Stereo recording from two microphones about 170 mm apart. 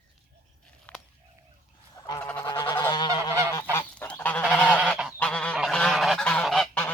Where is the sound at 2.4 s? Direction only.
25° left (ahead or behind).